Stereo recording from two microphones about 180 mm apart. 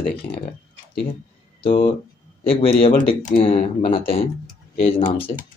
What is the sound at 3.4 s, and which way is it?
Speech, 30° left (ahead or behind).